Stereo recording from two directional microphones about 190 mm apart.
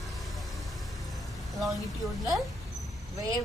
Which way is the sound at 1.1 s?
Centre (ahead or behind).